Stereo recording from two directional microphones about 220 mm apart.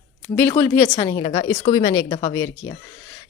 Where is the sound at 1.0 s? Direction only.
25° left (ahead or behind).